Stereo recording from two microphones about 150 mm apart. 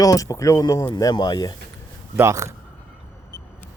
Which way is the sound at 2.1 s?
20° right (ahead or behind).